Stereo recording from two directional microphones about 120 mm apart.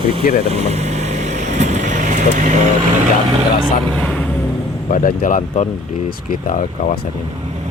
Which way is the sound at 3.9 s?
5° left (ahead or behind).